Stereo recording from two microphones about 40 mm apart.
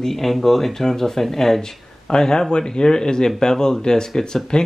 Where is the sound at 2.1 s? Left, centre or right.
Centre.